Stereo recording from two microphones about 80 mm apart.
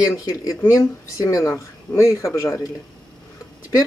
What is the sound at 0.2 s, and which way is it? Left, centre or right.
Speech, left.